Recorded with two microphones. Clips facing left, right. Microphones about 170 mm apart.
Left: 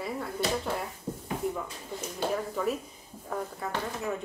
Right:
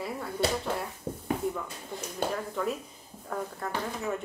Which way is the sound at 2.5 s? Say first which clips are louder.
Left 1 dB; 5° left (ahead or behind).